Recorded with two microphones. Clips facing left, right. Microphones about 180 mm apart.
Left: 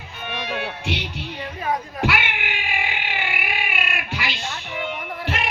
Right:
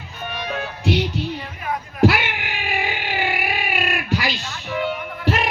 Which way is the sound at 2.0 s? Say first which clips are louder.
Right 6 dB; 40° right (ahead or behind).